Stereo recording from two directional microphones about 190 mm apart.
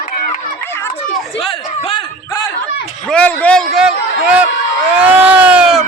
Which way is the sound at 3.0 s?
5° left (ahead or behind).